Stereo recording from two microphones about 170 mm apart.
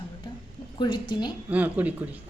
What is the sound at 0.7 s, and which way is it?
Speech, 25° left (ahead or behind).